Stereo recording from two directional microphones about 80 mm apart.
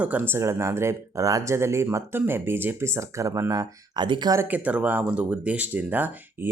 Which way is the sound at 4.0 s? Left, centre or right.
Right.